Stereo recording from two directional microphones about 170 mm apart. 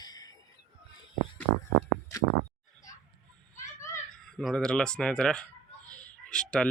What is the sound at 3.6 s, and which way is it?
Children playing, 15° left (ahead or behind).